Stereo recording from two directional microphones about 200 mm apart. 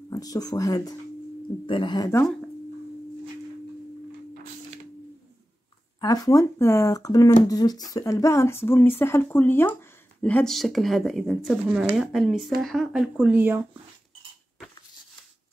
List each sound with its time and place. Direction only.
0.1 s speech: 20° left (ahead or behind)
5.9 s speech: 20° left (ahead or behind); by 13.6 s 10° right (ahead or behind)